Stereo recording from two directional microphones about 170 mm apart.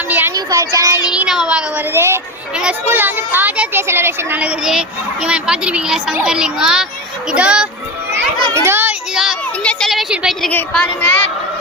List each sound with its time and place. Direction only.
0.1 s child singing: 10° right (ahead or behind)
0.3 s a child's voice: 20° right (ahead or behind)
1.1 s a woman's voice: 5° right (ahead or behind)
8.5 s child singing: 15° right (ahead or behind)
10.5 s a woman's voice: 10° left (ahead or behind)